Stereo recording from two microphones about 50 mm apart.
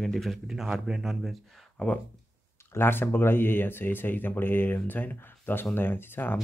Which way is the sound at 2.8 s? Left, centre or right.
Left.